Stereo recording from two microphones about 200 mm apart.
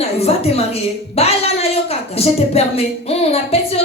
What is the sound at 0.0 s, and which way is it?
A woman's voice, 30° left (ahead or behind).